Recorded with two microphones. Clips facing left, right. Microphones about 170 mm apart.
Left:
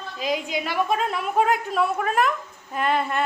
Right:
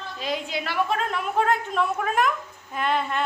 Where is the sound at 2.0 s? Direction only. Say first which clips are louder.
Left 1 dB; centre (ahead or behind).